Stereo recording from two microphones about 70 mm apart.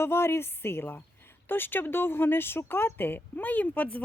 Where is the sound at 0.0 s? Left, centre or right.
Left.